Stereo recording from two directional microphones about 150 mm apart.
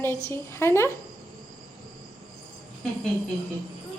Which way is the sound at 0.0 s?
15° left (ahead or behind).